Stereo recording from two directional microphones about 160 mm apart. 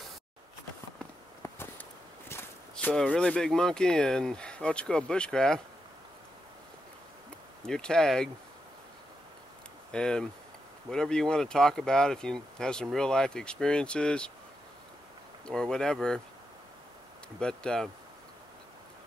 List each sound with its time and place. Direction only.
1.4 s a sound: 15° left (ahead or behind)
2.7 s speech: 5° left (ahead or behind)
7.6 s speech: 5° left (ahead or behind)
9.8 s speech: 5° left (ahead or behind)
15.4 s speech: 5° left (ahead or behind)
17.4 s speech: 5° left (ahead or behind)